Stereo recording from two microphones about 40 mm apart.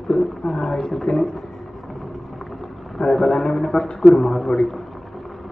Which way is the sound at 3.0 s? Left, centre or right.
Centre.